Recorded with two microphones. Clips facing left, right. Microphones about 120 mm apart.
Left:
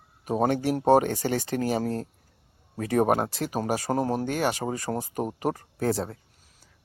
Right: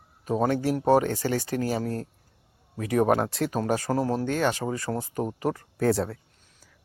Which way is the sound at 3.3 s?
Centre (ahead or behind).